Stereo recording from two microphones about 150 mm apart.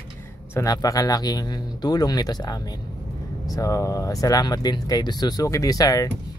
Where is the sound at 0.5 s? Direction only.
25° left (ahead or behind).